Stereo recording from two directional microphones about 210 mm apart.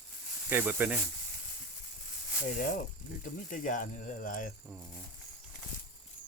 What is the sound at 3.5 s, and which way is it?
Speech, 40° left (ahead or behind).